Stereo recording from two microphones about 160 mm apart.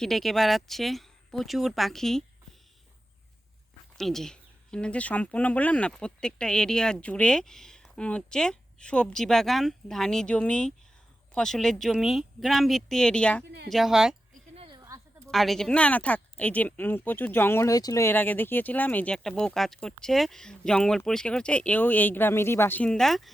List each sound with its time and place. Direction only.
0.0 s speech: centre (ahead or behind)
3.9 s speech: centre (ahead or behind)
13.4 s a woman's voice: 90° right
13.7 s speech: centre (ahead or behind)
14.5 s a sound: 35° right (ahead or behind)
14.8 s a sound: 20° right (ahead or behind)
15.3 s speech: centre (ahead or behind)